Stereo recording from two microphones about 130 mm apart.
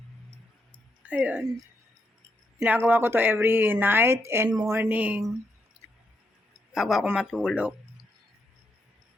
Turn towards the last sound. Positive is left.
turn(degrees=-10)  # may be behind; listen again after turning